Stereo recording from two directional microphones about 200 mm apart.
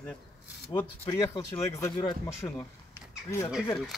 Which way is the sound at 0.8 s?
15° left (ahead or behind).